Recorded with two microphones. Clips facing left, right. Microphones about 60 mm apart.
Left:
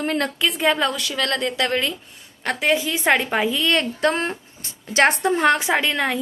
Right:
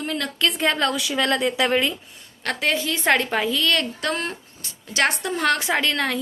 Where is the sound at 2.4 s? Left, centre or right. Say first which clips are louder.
Left 3 dB; centre.